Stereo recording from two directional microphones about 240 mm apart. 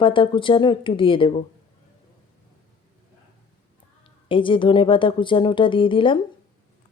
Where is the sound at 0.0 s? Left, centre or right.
Left.